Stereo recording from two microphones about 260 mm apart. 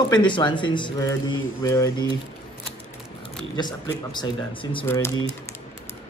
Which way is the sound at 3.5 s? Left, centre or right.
Centre.